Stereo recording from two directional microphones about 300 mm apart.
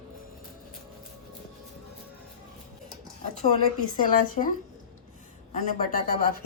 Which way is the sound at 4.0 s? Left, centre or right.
Left.